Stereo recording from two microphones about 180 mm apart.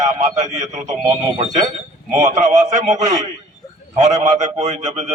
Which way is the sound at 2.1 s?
40° right (ahead or behind).